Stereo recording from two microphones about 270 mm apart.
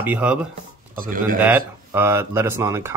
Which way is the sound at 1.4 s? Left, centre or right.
Centre.